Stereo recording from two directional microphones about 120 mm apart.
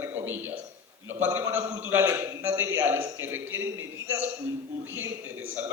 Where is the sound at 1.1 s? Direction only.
20° right (ahead or behind).